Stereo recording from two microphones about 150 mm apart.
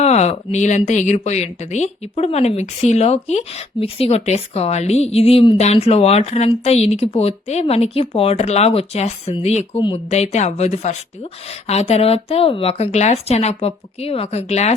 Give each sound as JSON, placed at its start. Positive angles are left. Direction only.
{"t": 0.0, "sound": "speech", "side_deg": 45}